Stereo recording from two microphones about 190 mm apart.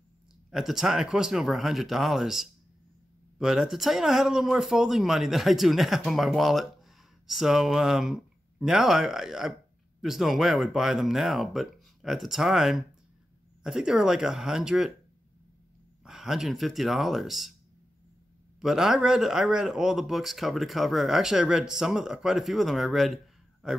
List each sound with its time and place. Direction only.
0.5 s speech: centre (ahead or behind)
16.0 s speech: 5° right (ahead or behind)
18.6 s speech: centre (ahead or behind)